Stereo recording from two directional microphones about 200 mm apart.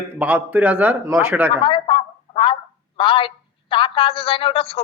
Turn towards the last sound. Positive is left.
turn(degrees=30)  # may be behind; listen again after turning